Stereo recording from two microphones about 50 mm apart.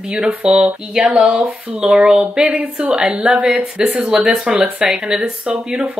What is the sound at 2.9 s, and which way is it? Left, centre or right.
Speech, centre.